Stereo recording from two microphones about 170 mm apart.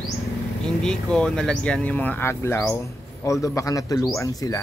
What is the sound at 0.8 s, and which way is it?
A man's voice, 5° left (ahead or behind).